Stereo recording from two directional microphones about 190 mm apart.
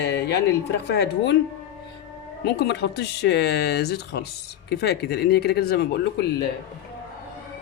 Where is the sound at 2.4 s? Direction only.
60° left (ahead or behind).